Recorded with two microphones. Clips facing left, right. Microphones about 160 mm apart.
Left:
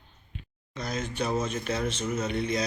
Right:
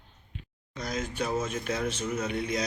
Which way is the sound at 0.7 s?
10° right (ahead or behind).